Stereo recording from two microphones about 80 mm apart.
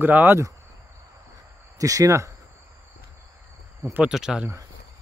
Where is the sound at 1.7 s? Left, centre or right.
Right.